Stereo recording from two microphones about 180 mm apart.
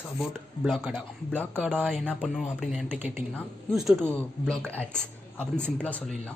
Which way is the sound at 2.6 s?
5° right (ahead or behind).